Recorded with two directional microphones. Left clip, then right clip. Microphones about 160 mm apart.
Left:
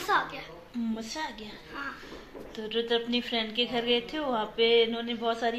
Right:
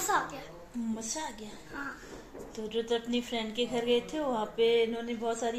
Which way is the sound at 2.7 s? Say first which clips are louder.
Left 3 dB; centre (ahead or behind).